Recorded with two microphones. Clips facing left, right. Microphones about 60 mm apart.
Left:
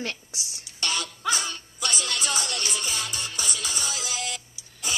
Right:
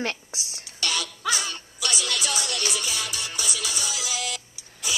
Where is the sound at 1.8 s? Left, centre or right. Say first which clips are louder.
Right 1 dB; left.